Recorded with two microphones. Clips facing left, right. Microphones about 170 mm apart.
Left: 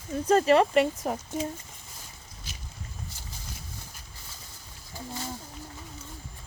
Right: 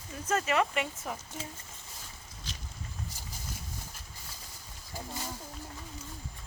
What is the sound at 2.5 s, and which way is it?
Boat, 10° left (ahead or behind).